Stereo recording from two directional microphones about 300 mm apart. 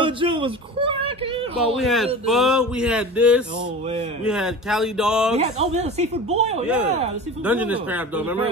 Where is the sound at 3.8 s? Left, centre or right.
Right.